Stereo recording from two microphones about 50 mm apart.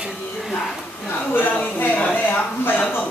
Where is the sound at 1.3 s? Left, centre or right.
Left.